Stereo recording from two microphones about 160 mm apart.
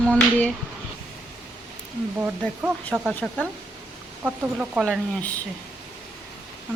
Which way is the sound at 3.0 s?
Centre (ahead or behind).